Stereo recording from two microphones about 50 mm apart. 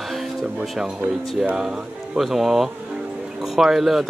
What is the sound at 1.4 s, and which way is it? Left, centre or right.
Speech, centre.